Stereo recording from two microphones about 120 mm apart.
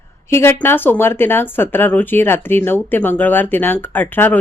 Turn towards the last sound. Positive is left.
turn(degrees=15)  # may be behind; listen again after turning